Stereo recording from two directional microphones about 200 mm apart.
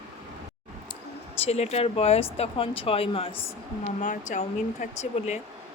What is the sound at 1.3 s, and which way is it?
Speech, 30° left (ahead or behind).